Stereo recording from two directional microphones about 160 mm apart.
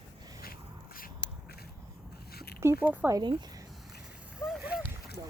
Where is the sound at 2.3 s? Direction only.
75° left (ahead or behind).